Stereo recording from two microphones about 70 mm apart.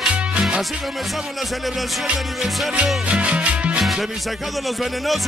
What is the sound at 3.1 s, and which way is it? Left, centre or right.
Music, centre.